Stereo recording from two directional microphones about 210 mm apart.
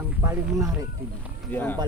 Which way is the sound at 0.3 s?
15° right (ahead or behind).